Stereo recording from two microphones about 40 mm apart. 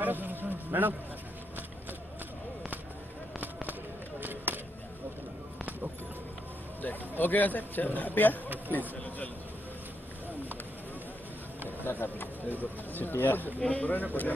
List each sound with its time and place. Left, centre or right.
0.0 s music: right
4.2 s a sound: right
6.8 s a man's voice: left
11.8 s speech: left
13.6 s speech: left